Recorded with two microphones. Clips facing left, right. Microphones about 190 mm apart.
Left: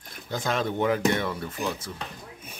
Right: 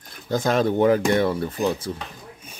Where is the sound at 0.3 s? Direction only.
40° right (ahead or behind).